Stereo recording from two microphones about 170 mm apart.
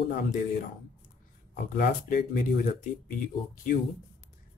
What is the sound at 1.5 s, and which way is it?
Speech, 50° left (ahead or behind).